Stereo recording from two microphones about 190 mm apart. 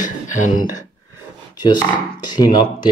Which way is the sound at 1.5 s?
20° left (ahead or behind).